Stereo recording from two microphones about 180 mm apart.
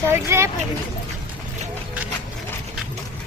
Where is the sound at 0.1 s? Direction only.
15° right (ahead or behind).